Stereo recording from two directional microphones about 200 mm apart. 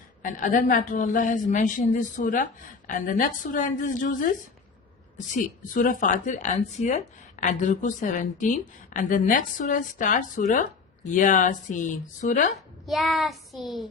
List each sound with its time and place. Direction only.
0.2 s a woman's voice: 40° left (ahead or behind)
12.8 s child singing: centre (ahead or behind)